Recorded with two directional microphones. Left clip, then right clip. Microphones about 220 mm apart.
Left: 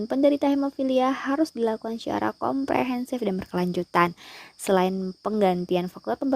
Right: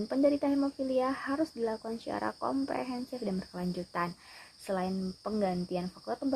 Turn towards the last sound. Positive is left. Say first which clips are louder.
# left 8 dB
turn(degrees=40)  # may be behind; listen again after turning